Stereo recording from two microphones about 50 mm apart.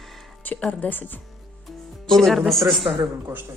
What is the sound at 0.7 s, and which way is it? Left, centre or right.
Speech, left.